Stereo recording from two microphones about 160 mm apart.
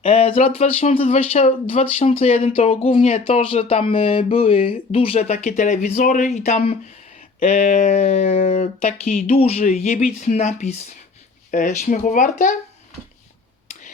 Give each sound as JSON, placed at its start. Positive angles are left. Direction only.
{"t": 0.0, "sound": "speech", "side_deg": 35}
{"t": 9.4, "sound": "speech", "side_deg": 45}